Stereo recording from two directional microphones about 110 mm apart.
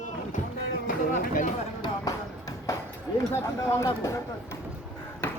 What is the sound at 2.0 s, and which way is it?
Music, 30° left (ahead or behind).